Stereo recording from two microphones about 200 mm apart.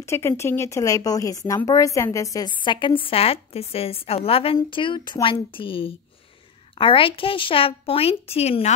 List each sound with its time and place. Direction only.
0.0 s speech: 15° left (ahead or behind); by 8.7 s 30° left (ahead or behind)